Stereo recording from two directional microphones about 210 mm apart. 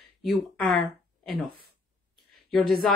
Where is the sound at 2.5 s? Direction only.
Centre (ahead or behind).